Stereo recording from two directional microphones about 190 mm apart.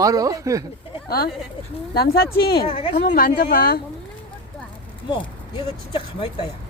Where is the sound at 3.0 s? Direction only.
50° left (ahead or behind).